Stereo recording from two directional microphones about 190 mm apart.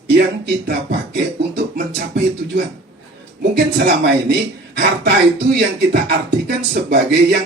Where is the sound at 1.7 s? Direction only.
65° right (ahead or behind).